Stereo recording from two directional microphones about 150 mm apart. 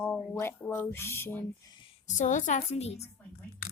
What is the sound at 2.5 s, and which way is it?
Speech, 45° left (ahead or behind).